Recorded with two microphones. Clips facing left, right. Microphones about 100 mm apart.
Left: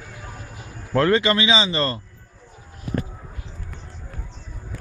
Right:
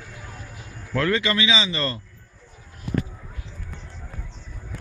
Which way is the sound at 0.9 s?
35° left (ahead or behind).